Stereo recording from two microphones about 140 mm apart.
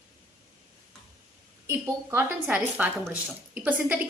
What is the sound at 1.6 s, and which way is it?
Speech, 15° right (ahead or behind).